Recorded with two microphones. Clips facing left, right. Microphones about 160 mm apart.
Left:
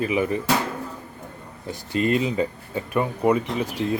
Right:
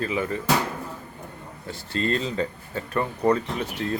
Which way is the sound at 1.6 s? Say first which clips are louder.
Left 4 dB; 15° left (ahead or behind).